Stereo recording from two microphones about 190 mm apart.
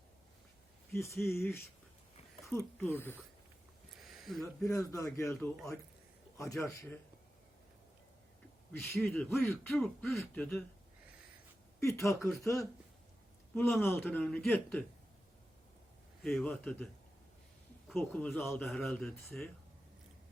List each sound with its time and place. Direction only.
0.9 s speech: 15° left (ahead or behind)
4.0 s a sound: centre (ahead or behind)
4.6 s speech: 15° left (ahead or behind)
8.9 s speech: 10° left (ahead or behind)
9.7 s speech: centre (ahead or behind)
11.8 s a man's voice: 15° left (ahead or behind)
16.2 s speech: 5° left (ahead or behind)
17.9 s speech: 5° left (ahead or behind)